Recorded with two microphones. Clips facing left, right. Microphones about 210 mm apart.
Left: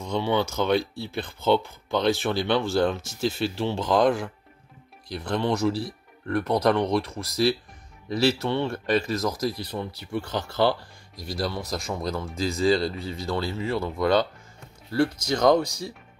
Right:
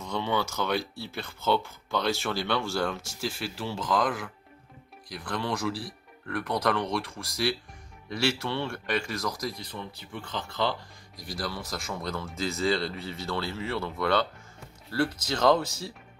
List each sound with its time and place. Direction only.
0.0 s speech: 15° left (ahead or behind)
10.6 s speech: 35° left (ahead or behind); by 15.9 s 15° left (ahead or behind)